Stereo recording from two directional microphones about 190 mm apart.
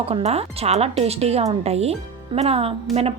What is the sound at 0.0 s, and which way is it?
Speech, 30° right (ahead or behind).